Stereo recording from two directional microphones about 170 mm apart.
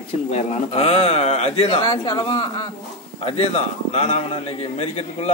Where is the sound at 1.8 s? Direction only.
25° left (ahead or behind).